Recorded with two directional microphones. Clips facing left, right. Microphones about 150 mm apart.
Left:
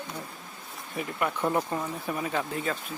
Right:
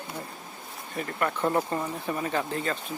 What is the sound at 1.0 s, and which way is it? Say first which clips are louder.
Speech: right 1 dB; 10° left (ahead or behind).